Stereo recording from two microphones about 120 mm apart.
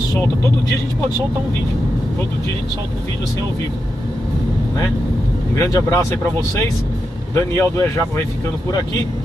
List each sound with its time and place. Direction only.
5.6 s speech: 30° left (ahead or behind)
7.3 s speech: 25° left (ahead or behind)